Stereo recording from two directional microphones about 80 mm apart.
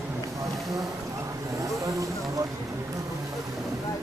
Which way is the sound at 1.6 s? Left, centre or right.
Right.